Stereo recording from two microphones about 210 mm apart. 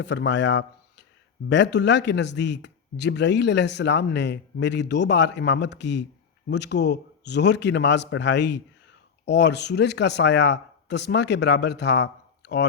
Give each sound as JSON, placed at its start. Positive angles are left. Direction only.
{"t": 0.0, "sound": "speech", "side_deg": 55}